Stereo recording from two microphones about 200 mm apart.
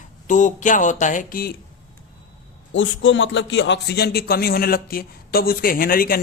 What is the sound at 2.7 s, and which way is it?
A man's voice, 70° left (ahead or behind).